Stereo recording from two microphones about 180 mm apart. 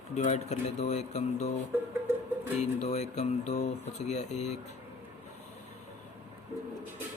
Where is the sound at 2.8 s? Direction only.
40° left (ahead or behind).